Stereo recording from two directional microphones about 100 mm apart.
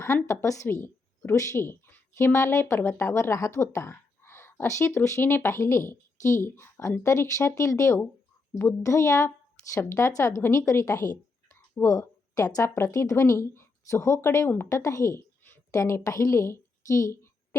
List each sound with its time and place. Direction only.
0.3 s a woman's voice: 30° left (ahead or behind)